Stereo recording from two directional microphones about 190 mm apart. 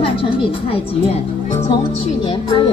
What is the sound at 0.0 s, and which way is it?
Speech, 30° left (ahead or behind).